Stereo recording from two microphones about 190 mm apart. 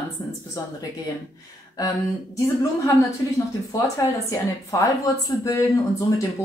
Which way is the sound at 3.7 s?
15° left (ahead or behind).